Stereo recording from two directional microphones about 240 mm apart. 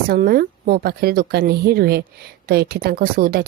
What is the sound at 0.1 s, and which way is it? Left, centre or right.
Speech, right.